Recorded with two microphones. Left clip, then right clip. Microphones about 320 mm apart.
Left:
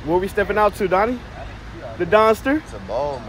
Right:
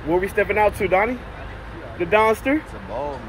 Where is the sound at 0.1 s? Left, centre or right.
Centre.